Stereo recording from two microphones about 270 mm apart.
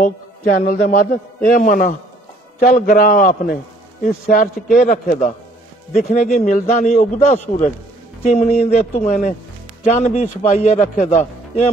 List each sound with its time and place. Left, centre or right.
0.7 s a man's voice: left